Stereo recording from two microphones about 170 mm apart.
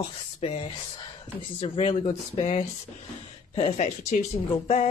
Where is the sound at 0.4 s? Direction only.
35° left (ahead or behind).